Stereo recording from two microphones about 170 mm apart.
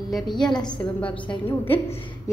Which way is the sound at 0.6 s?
30° left (ahead or behind).